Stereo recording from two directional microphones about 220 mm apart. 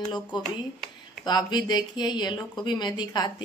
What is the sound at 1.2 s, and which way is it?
Speech, 20° left (ahead or behind).